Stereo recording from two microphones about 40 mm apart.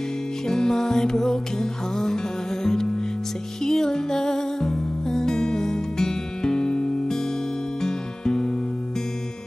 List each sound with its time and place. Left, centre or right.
0.5 s music: centre